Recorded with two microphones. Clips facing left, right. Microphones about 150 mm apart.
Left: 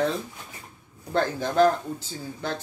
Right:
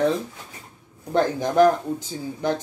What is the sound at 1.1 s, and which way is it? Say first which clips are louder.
Speech: right 4 dB; 15° right (ahead or behind).